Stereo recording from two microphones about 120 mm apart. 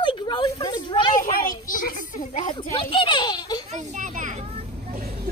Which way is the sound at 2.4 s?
40° left (ahead or behind).